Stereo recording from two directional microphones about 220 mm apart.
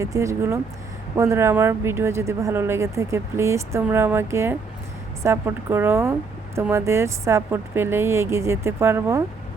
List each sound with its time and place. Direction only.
0.0 s speech: 15° right (ahead or behind)